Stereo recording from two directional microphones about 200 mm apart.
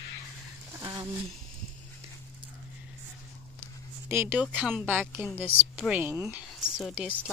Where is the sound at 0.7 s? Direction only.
15° right (ahead or behind).